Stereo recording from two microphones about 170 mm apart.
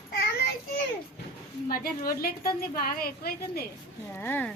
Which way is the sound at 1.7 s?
60° left (ahead or behind).